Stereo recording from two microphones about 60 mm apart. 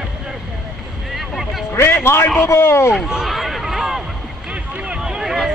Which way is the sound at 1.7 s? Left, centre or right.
Left.